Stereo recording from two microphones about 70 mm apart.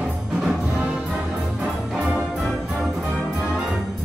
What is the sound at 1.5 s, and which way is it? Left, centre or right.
Music, centre.